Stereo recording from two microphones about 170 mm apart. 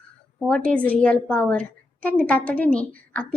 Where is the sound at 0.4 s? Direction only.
5° left (ahead or behind).